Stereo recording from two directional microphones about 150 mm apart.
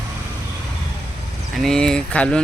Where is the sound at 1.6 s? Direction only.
5° left (ahead or behind).